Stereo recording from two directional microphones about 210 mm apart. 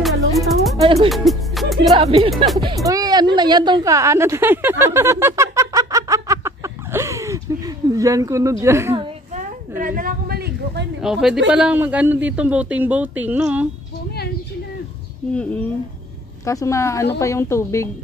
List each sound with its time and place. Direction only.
0.0 s music: centre (ahead or behind)
0.7 s speech: 25° right (ahead or behind)
1.0 s music: centre (ahead or behind)
1.8 s speech: 25° right (ahead or behind)
2.3 s speech: centre (ahead or behind)
2.8 s speech: 15° right (ahead or behind)
3.3 s a sound: 20° right (ahead or behind)
9.3 s a sound: 40° right (ahead or behind)
11.0 s a man's voice: 5° right (ahead or behind)
16.4 s speech: 15° left (ahead or behind)